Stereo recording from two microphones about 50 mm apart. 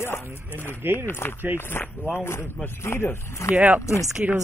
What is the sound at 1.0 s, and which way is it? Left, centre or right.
Speech, left.